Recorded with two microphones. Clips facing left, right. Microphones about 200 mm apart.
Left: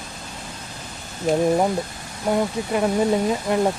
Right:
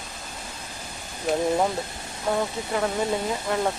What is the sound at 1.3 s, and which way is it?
Speech, centre (ahead or behind).